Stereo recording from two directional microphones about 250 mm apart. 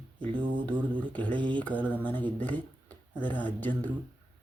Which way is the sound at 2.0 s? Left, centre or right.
Centre.